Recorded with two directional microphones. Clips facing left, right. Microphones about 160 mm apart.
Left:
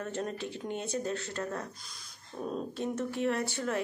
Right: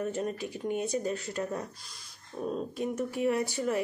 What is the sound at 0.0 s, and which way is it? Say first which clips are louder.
A woman's voice: right 3 dB; 10° right (ahead or behind).